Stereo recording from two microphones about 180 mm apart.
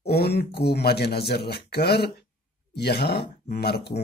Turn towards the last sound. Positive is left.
turn(degrees=65)  # may be behind; listen again after turning